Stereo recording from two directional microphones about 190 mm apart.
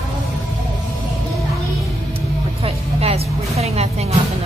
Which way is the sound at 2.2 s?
30° right (ahead or behind).